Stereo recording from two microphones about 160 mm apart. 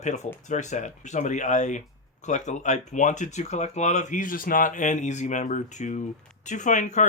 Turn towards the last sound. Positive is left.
turn(degrees=50)  # may be behind; listen again after turning